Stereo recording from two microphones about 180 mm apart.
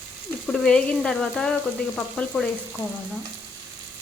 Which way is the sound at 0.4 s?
5° left (ahead or behind).